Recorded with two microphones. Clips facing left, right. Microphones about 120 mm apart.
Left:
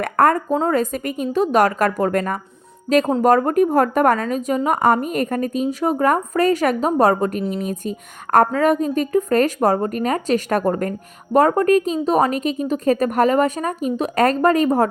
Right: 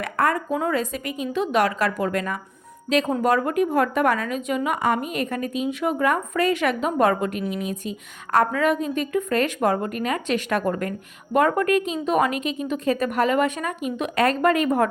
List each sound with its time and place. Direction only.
0.0 s a woman's voice: 50° left (ahead or behind)